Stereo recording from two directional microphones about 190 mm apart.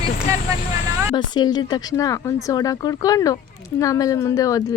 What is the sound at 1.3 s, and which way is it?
Speech, 20° left (ahead or behind).